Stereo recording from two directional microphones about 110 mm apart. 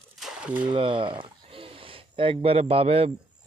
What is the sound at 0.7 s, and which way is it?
Speech, 50° right (ahead or behind).